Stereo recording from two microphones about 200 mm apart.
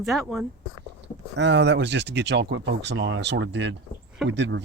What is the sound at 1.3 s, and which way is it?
Speech, 60° right (ahead or behind).